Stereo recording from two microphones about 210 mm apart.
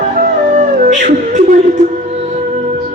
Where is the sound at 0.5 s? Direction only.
35° right (ahead or behind).